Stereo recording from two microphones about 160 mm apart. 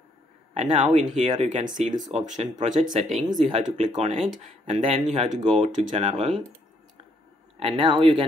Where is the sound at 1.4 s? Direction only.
50° right (ahead or behind).